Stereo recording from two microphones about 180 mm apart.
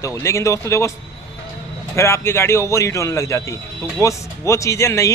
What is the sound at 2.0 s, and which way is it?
A man's voice, 15° left (ahead or behind).